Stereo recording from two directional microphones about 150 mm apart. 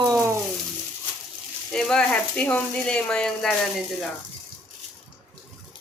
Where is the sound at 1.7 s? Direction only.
5° left (ahead or behind).